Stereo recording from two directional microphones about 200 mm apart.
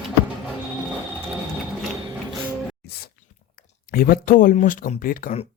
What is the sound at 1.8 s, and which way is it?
Mechanisms, centre (ahead or behind).